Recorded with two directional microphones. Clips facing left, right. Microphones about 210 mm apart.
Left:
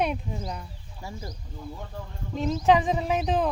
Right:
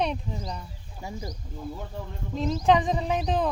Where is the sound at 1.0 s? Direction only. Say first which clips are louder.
Right 2 dB; 15° right (ahead or behind).